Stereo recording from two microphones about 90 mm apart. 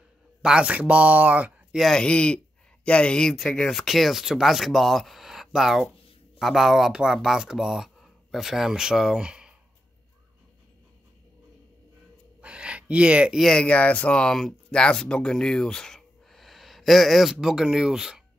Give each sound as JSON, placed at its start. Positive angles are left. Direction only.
{"t": 0.4, "sound": "speech", "side_deg": -10}
{"t": 1.8, "sound": "speech", "side_deg": 5}
{"t": 12.4, "sound": "a sound", "side_deg": -10}
{"t": 13.4, "sound": "speech", "side_deg": 10}